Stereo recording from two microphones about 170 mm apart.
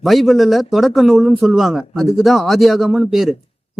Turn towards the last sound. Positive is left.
turn(degrees=0)  # may be behind; listen again after turning